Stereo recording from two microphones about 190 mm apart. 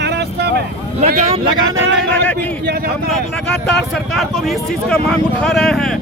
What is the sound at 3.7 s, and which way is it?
Speech, centre (ahead or behind).